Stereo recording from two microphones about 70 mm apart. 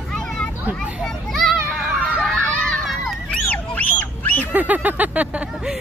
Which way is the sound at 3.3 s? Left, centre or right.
Left.